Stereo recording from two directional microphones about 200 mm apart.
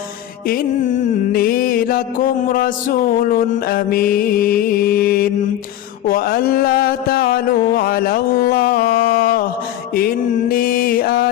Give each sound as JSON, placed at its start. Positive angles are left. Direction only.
{"t": 0.4, "sound": "mantra", "side_deg": 45}